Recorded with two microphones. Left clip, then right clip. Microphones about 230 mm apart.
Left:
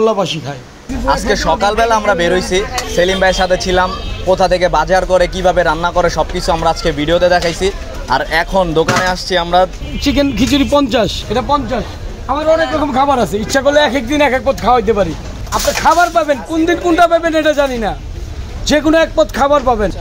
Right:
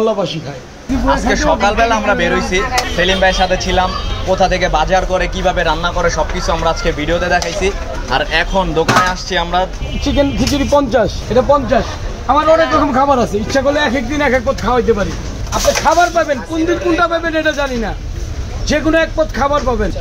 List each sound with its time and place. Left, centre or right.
0.0 s speech: left
13.1 s a man's voice: left